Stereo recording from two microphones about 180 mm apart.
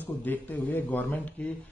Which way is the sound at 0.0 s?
10° left (ahead or behind).